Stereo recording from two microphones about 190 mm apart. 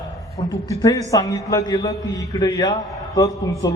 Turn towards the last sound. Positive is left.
turn(degrees=20)  # may be behind; listen again after turning